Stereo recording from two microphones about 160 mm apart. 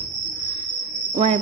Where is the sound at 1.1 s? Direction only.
40° right (ahead or behind).